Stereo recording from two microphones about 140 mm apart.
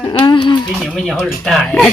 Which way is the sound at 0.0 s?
30° left (ahead or behind).